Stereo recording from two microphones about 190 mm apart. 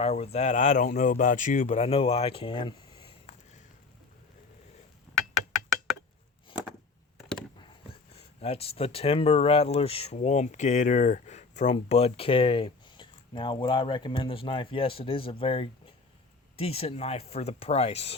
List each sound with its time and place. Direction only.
0.0 s speech: 35° left (ahead or behind)
5.6 s a sound: centre (ahead or behind)
8.1 s speech: 30° left (ahead or behind)